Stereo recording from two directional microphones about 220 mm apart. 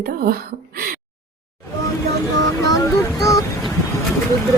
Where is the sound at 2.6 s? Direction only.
15° left (ahead or behind).